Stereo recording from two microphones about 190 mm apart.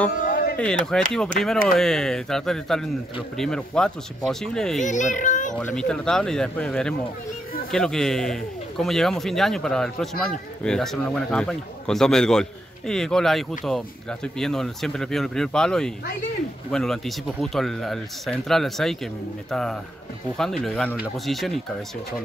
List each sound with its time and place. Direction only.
0.2 s a sound: 45° left (ahead or behind)
0.6 s speech: 5° left (ahead or behind)
4.8 s a child's voice: 40° left (ahead or behind)
5.5 s speech: 5° left (ahead or behind)